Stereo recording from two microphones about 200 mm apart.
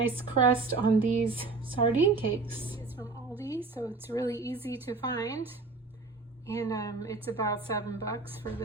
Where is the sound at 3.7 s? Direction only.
10° left (ahead or behind).